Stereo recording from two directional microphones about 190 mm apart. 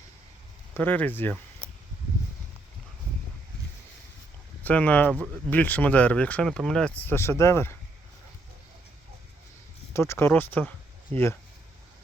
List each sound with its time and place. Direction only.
0.7 s speech: 10° left (ahead or behind)
4.6 s speech: 5° left (ahead or behind)
9.9 s speech: 15° left (ahead or behind)